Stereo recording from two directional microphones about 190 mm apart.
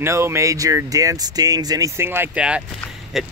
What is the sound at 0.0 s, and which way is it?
Speech, 15° right (ahead or behind).